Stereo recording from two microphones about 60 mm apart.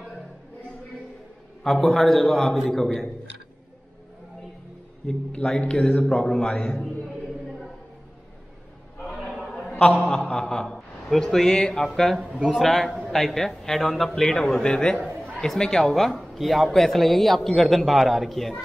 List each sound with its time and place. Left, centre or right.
1.6 s a man's voice: centre
5.0 s a man's voice: centre
9.0 s a sound: centre
9.4 s a sound: centre
12.5 s a man's voice: centre
15.0 s chatter: right
15.3 s a man's voice: centre